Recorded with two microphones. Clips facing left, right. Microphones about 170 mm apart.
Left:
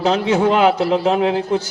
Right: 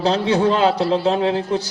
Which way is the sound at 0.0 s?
35° right (ahead or behind).